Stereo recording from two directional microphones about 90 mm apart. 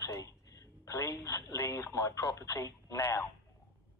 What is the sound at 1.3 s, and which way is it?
Speech, 35° left (ahead or behind).